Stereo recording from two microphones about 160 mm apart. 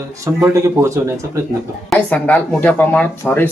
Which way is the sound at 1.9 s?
10° left (ahead or behind).